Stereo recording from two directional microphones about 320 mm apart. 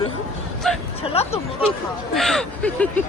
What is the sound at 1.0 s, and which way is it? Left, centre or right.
Speech, centre.